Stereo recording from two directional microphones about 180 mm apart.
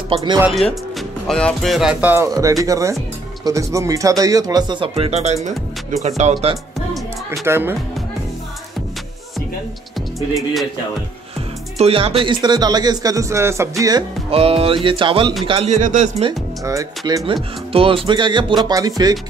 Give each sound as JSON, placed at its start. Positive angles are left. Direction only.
{"t": 0.1, "sound": "speech", "side_deg": -25}
{"t": 0.5, "sound": "speech", "side_deg": 0}
{"t": 7.2, "sound": "speech", "side_deg": -15}
{"t": 11.8, "sound": "speech", "side_deg": -30}
{"t": 14.3, "sound": "speech", "side_deg": -30}
{"t": 15.8, "sound": "speech", "side_deg": -40}
{"t": 16.3, "sound": "speech", "side_deg": -20}
{"t": 17.3, "sound": "speech", "side_deg": -30}